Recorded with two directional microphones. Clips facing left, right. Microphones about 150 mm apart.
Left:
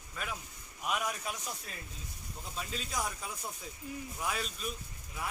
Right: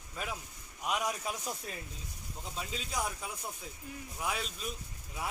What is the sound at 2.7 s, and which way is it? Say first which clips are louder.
Speech: right 1 dB; 15° right (ahead or behind).